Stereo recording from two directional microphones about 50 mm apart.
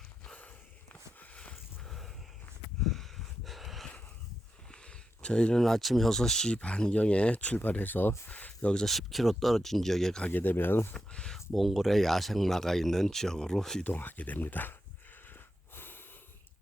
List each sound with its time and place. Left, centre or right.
1.4 s a sound: centre
1.9 s a sound: centre
4.7 s a sound: centre
5.6 s speech: centre
6.5 s speech: left
8.7 s speech: centre
10.2 s speech: left
10.9 s speech: centre
11.3 s speech: centre
13.8 s speech: left
15.3 s snort: left